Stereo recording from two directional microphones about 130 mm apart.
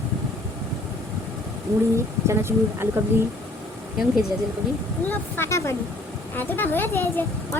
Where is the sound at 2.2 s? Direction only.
20° right (ahead or behind).